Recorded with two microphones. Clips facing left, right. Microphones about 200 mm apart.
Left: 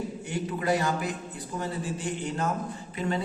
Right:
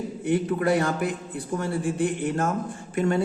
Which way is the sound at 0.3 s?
55° right (ahead or behind).